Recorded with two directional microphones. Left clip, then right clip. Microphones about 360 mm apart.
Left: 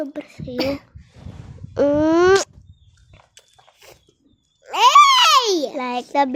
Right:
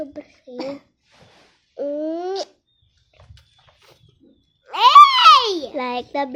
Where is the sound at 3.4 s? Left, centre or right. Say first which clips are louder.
Left 4 dB; left.